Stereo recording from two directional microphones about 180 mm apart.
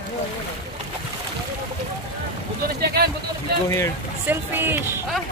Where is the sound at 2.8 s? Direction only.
60° right (ahead or behind).